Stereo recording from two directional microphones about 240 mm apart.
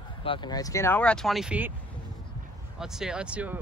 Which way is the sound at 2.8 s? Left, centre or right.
Centre.